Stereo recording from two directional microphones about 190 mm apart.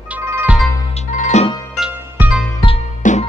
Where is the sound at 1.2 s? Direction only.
35° left (ahead or behind).